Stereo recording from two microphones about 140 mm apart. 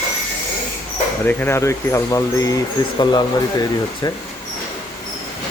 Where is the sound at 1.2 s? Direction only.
15° left (ahead or behind).